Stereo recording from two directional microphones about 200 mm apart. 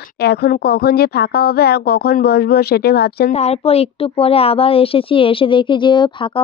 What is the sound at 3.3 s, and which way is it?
Speech, 30° left (ahead or behind).